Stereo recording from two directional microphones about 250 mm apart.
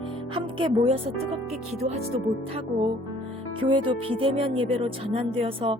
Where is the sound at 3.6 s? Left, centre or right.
Right.